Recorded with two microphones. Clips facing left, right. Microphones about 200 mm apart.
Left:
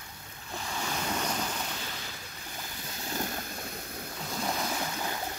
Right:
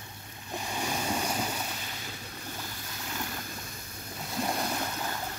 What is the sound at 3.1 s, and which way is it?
Vehicle, 40° left (ahead or behind).